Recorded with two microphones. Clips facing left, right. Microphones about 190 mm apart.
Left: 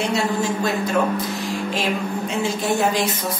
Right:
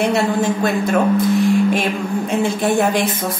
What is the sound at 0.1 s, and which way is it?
A woman's voice, 55° right (ahead or behind).